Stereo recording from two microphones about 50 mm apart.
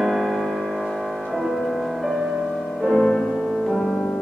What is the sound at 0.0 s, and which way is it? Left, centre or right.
Music, centre.